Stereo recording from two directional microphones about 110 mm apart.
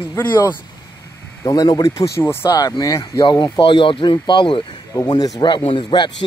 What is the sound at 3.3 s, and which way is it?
Speech, 45° left (ahead or behind).